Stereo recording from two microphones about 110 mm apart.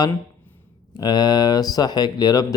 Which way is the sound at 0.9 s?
40° left (ahead or behind).